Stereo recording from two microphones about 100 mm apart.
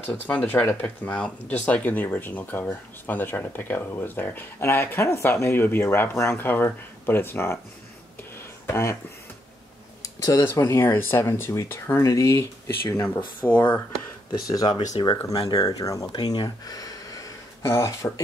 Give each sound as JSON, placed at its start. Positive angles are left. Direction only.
{"t": 0.1, "sound": "speech", "side_deg": 10}
{"t": 8.4, "sound": "a sound", "side_deg": 25}
{"t": 10.0, "sound": "a sound", "side_deg": 35}
{"t": 10.5, "sound": "speech", "side_deg": 35}
{"t": 10.8, "sound": "speech", "side_deg": 25}
{"t": 14.5, "sound": "speech", "side_deg": 40}
{"t": 16.1, "sound": "speech", "side_deg": 50}